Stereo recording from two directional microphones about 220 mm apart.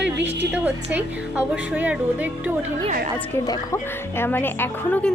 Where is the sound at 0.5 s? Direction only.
5° right (ahead or behind).